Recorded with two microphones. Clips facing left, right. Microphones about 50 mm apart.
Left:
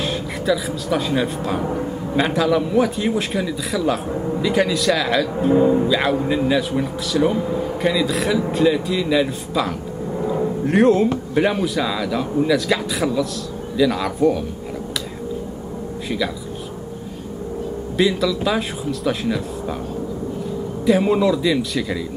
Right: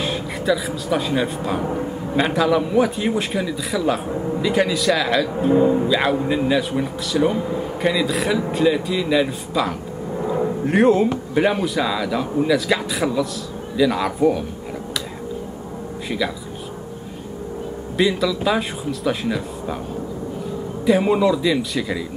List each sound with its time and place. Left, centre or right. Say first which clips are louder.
0.0 s speech: even; centre
17.9 s speech: even; centre
20.8 s speech: even; centre